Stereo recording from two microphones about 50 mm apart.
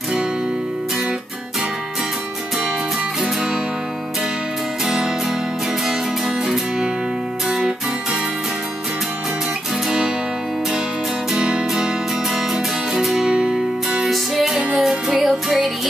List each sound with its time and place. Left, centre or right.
4.8 s music: centre
9.8 s music: centre
11.3 s music: centre
12.9 s music: centre
14.1 s music: centre